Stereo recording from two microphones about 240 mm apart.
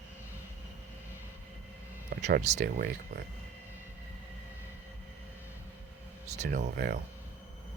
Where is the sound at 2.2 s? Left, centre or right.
Right.